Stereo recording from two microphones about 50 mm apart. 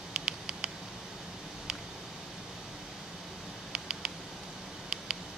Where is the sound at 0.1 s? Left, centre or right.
Centre.